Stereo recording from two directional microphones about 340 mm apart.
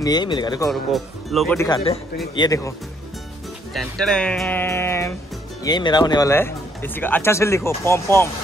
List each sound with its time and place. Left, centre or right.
0.0 s speech: centre
0.7 s speech: centre
3.7 s speech: centre